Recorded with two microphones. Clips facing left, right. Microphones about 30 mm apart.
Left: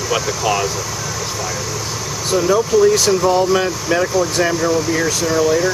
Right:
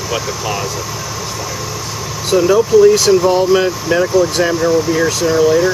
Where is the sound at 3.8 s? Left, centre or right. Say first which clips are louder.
Right 4 dB; centre.